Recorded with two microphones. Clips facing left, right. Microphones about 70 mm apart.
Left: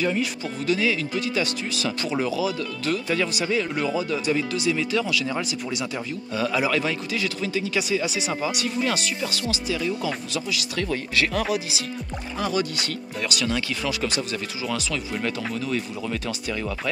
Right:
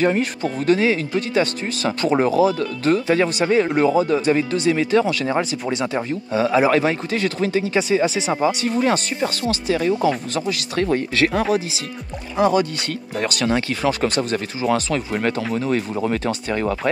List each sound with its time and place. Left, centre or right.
0.0 s speech: right
12.4 s speech: right